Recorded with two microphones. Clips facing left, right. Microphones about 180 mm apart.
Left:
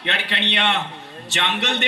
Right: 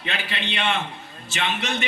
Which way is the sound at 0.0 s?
70° left (ahead or behind).